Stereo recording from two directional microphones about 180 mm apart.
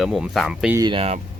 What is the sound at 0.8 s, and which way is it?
Speech, 25° right (ahead or behind).